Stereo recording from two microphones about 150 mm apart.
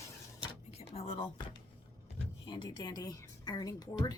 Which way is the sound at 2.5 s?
30° left (ahead or behind).